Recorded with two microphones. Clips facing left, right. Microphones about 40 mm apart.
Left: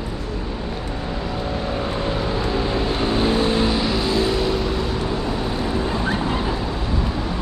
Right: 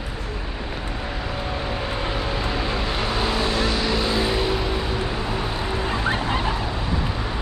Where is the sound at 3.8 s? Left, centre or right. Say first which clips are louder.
Left 2 dB; centre.